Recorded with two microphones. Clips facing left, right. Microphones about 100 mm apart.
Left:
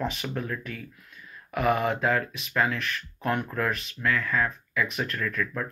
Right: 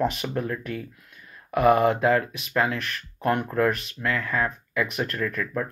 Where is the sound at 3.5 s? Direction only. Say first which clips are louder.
Right 6 dB; 45° right (ahead or behind).